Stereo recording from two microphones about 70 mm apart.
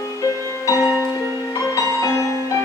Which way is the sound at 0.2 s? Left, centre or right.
Left.